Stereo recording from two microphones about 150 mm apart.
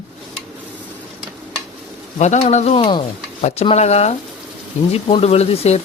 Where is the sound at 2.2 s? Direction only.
45° left (ahead or behind).